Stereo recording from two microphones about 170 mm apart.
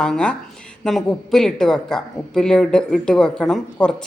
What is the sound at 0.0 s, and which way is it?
Speech, 5° left (ahead or behind).